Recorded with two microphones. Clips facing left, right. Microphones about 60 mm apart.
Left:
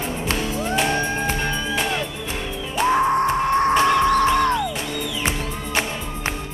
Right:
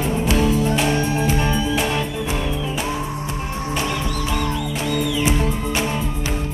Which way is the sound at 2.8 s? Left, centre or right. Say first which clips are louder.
Left 8 dB; left.